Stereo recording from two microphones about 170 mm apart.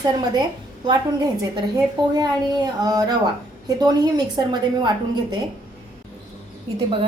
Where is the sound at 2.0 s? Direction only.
25° right (ahead or behind).